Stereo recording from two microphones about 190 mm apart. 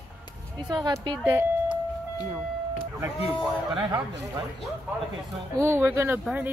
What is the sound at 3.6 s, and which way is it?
Speech, 20° right (ahead or behind).